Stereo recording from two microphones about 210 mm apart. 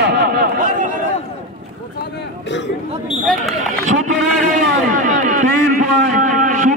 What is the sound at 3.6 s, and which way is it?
Speech, 35° right (ahead or behind).